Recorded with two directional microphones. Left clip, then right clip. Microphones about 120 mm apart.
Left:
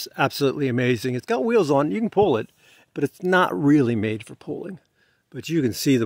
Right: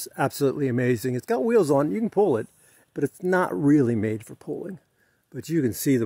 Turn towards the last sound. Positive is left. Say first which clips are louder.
# left 2 dB
turn(degrees=25)  # may be behind; listen again after turning